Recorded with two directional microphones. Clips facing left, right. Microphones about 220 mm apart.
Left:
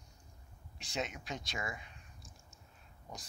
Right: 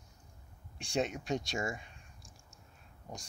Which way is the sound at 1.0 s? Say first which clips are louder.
Right 7 dB; 50° right (ahead or behind).